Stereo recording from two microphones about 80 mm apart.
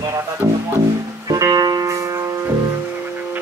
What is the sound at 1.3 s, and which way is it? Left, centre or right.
Music, right.